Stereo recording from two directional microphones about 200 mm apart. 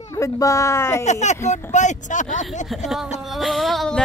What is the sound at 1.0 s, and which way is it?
Speech, 35° left (ahead or behind).